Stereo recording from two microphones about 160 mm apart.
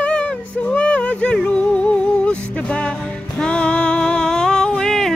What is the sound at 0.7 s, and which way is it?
Music, 5° left (ahead or behind).